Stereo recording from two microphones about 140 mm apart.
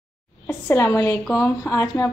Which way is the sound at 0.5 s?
20° left (ahead or behind).